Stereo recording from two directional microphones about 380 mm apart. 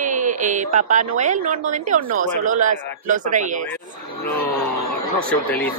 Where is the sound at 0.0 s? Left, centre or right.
Centre.